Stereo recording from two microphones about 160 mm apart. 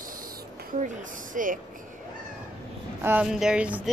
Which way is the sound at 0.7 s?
55° right (ahead or behind).